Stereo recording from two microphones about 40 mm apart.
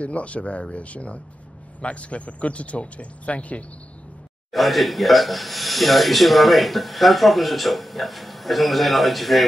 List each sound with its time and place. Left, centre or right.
0.0 s speech: left
4.5 s speech: centre